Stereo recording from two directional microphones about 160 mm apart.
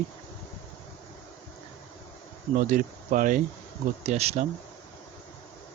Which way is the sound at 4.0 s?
40° right (ahead or behind).